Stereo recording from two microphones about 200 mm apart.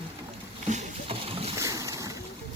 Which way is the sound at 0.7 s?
30° right (ahead or behind).